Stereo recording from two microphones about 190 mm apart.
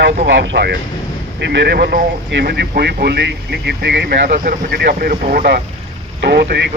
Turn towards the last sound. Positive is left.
turn(degrees=-60)  # may be behind; listen again after turning